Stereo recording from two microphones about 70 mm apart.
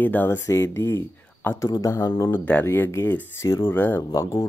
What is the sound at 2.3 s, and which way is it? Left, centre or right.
Speech, left.